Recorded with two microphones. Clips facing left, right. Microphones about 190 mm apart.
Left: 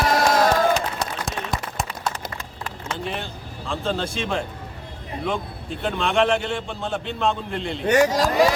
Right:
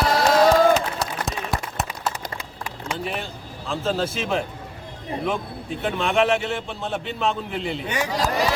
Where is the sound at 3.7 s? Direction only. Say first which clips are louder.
Right 2 dB; centre (ahead or behind).